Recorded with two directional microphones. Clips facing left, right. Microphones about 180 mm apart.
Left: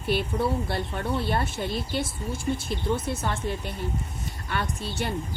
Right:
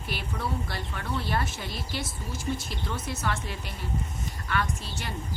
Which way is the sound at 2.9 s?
30° left (ahead or behind).